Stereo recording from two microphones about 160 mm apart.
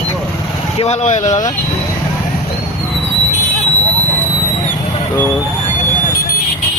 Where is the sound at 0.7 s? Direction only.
40° left (ahead or behind).